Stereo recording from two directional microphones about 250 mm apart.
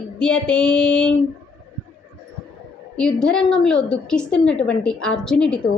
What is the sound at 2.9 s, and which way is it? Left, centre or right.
A woman's voice, centre.